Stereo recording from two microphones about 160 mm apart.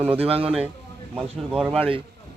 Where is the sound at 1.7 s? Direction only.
35° right (ahead or behind).